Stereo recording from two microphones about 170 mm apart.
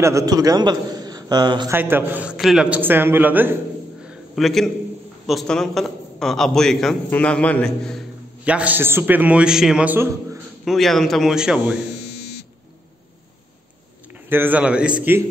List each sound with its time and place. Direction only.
0.0 s a man's voice: 20° right (ahead or behind)
1.7 s a man's voice: 10° right (ahead or behind)
4.0 s a sound: 5° right (ahead or behind)
5.2 s a man's voice: centre (ahead or behind)
8.5 s a man's voice: 10° right (ahead or behind)
10.6 s a man's voice: centre (ahead or behind)
14.1 s a man's voice: 10° right (ahead or behind)